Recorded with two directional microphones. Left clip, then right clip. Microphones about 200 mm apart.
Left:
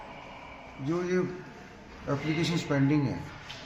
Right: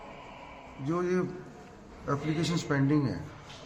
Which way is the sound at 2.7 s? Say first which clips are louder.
Left 1 dB; 20° right (ahead or behind).